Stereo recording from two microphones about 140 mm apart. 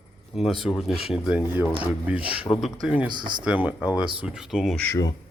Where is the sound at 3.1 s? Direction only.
35° right (ahead or behind).